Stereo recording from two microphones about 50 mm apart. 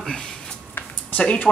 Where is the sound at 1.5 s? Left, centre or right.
Centre.